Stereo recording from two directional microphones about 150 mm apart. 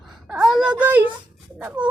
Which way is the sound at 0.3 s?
5° right (ahead or behind).